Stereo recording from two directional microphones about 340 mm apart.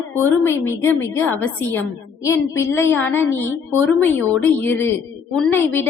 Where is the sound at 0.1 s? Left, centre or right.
Centre.